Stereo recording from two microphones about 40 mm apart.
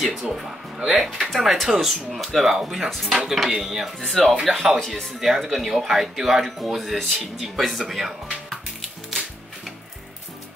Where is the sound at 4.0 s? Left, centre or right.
Centre.